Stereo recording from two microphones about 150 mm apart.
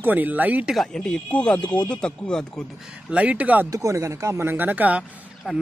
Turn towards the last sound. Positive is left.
turn(degrees=-5)  # may be behind; listen again after turning